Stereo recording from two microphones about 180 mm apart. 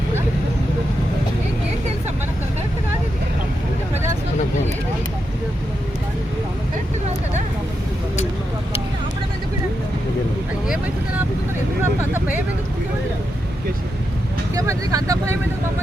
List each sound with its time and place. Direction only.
11.8 s vehicle: 10° right (ahead or behind)
14.5 s vehicle: 20° right (ahead or behind)